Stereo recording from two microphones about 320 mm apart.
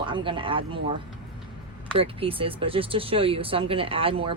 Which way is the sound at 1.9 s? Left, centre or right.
Centre.